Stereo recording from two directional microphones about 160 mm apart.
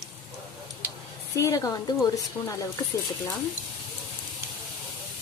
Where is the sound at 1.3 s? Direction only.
20° left (ahead or behind).